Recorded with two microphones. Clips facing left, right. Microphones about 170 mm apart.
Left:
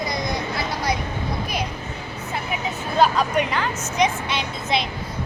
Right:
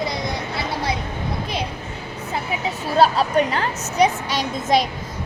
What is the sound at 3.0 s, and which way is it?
A woman's voice, 35° right (ahead or behind).